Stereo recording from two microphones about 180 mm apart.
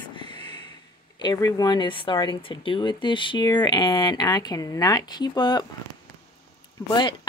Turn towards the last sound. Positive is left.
turn(degrees=25)  # may be behind; listen again after turning